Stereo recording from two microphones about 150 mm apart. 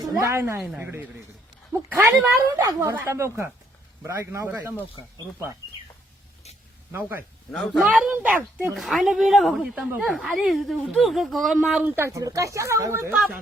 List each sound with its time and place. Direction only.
0.2 s speech: 20° right (ahead or behind)
0.6 s speech: 5° right (ahead or behind)
2.6 s a man's voice: 25° right (ahead or behind)
6.9 s speech: 15° right (ahead or behind)
7.5 s speech: 5° left (ahead or behind)
7.8 s speech: 5° right (ahead or behind)
13.1 s speech: 5° right (ahead or behind)